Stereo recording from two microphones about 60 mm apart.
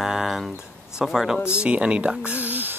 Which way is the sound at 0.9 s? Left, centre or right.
Centre.